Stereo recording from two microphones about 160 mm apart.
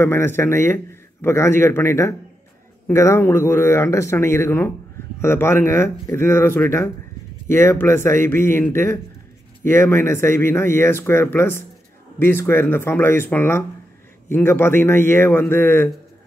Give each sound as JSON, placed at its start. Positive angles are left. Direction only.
{"t": 0.0, "sound": "speech", "side_deg": 15}